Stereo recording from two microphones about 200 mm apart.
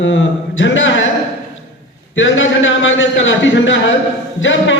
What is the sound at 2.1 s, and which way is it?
A man's voice, 70° left (ahead or behind).